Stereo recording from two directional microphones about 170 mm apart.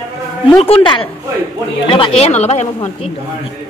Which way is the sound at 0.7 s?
30° left (ahead or behind).